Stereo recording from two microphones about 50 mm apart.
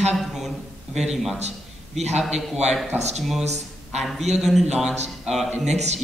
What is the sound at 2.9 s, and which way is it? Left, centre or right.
Speech, right.